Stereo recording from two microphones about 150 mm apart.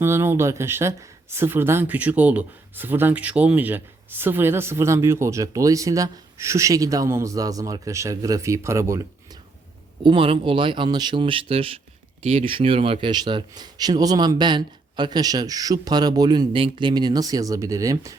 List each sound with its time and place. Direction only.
0.0 s speech: 15° right (ahead or behind)
10.0 s speech: 35° right (ahead or behind)